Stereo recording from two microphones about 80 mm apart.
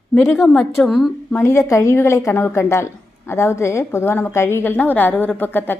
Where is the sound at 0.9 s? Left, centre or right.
Centre.